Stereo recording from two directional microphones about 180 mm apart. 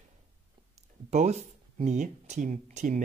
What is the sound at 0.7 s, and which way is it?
Speech, 40° right (ahead or behind).